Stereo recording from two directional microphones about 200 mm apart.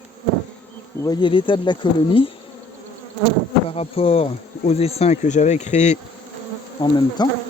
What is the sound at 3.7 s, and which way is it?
Speech, 30° left (ahead or behind).